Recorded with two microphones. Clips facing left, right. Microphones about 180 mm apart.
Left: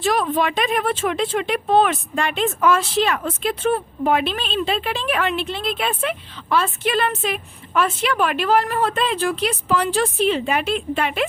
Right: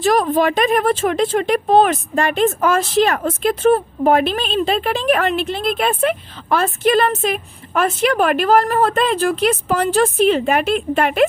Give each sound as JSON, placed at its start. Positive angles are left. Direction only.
{"t": 0.0, "sound": "a woman's voice", "side_deg": -40}